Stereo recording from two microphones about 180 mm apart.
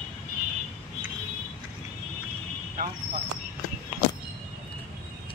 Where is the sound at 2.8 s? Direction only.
55° right (ahead or behind).